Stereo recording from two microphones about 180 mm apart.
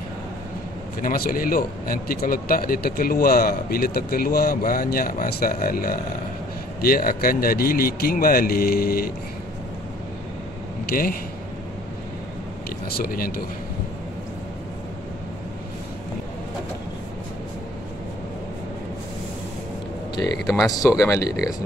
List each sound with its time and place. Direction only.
1.0 s a man's voice: 55° left (ahead or behind)
10.9 s speech: 50° left (ahead or behind)
12.9 s a man's voice: 55° left (ahead or behind)
20.4 s speech: centre (ahead or behind)
21.0 s speech: 15° left (ahead or behind)